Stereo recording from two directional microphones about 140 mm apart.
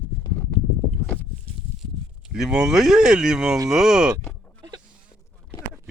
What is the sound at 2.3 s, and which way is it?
Speech, 5° right (ahead or behind).